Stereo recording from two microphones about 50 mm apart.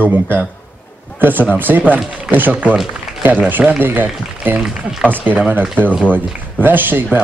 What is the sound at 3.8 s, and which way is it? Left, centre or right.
Speech, right.